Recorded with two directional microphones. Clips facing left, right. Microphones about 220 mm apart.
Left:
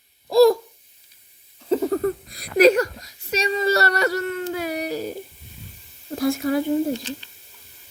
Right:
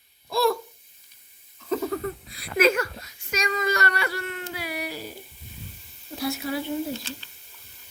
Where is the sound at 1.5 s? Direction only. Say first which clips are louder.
Left 6 dB; 25° left (ahead or behind).